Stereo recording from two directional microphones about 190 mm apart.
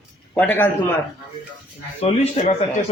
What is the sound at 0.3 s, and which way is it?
Speech, 10° left (ahead or behind).